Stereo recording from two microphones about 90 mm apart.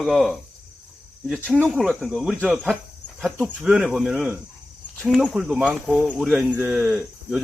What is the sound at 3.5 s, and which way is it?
Speech, 15° right (ahead or behind).